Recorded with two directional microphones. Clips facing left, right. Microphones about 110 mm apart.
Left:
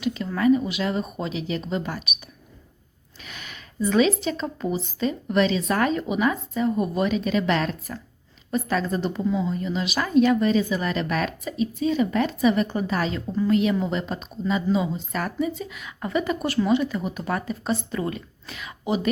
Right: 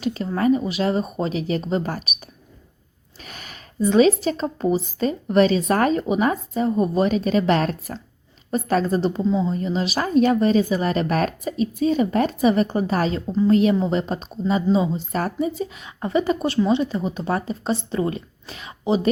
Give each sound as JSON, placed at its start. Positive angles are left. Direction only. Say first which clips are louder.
{"t": 0.0, "sound": "speech", "louder": "right 1 dB", "side_deg": -40}
{"t": 3.2, "sound": "speech", "louder": "right 1 dB", "side_deg": -40}
{"t": 13.2, "sound": "speech", "louder": "right 4 dB", "side_deg": -20}
{"t": 13.5, "sound": "speech", "louder": "right 4 dB", "side_deg": -35}